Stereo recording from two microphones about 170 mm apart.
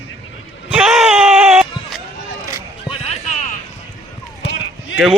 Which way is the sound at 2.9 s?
40° left (ahead or behind).